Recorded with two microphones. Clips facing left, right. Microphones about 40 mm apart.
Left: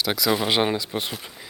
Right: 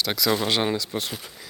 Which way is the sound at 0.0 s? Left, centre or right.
Centre.